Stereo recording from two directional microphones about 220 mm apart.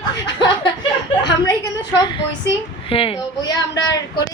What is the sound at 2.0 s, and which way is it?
Speech, 20° left (ahead or behind).